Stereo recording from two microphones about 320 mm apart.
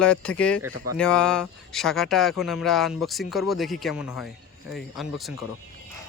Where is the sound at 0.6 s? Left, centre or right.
Right.